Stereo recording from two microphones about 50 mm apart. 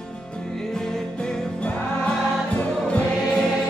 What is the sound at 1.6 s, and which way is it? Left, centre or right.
Music, left.